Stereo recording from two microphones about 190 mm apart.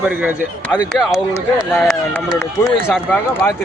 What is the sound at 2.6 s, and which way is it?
Speech, 5° left (ahead or behind).